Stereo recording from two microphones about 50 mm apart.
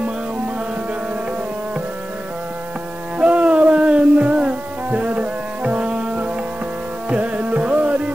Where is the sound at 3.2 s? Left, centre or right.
Right.